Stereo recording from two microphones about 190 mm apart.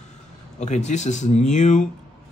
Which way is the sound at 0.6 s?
35° left (ahead or behind).